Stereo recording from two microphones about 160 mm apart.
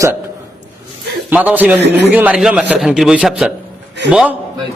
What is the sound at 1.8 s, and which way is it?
Speech, 90° right.